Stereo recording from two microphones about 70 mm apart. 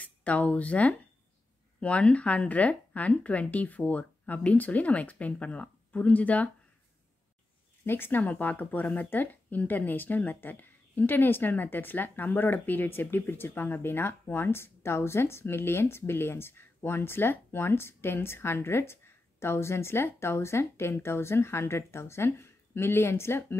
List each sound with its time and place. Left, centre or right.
0.0 s speech: left
7.8 s speech: left